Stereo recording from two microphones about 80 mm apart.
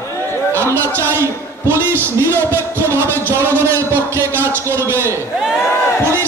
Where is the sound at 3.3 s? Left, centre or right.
Right.